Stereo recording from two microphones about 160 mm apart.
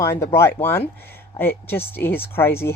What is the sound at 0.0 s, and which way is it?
Speech, 15° left (ahead or behind).